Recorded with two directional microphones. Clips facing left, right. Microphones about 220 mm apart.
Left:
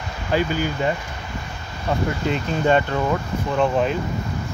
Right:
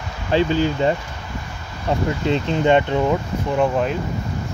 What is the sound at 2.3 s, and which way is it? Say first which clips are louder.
Speech: right 3 dB; 25° right (ahead or behind).